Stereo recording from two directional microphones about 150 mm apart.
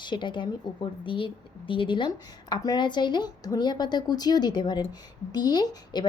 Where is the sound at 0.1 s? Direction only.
30° left (ahead or behind).